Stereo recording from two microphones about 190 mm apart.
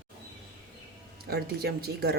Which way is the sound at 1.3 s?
55° right (ahead or behind).